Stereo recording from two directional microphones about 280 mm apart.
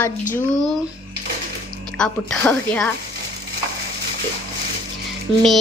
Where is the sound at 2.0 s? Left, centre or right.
Centre.